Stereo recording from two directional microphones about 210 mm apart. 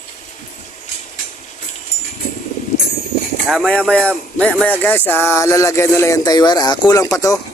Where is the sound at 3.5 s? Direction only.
5° left (ahead or behind).